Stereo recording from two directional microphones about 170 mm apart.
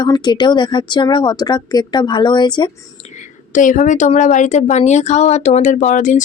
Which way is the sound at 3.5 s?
50° left (ahead or behind).